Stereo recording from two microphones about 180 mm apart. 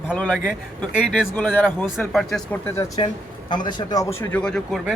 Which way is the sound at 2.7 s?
20° left (ahead or behind).